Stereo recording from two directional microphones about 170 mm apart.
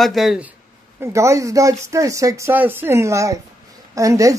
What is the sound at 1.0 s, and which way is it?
A woman's voice, 15° right (ahead or behind).